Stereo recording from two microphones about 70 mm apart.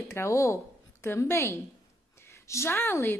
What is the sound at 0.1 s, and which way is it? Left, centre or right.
A woman's voice, left.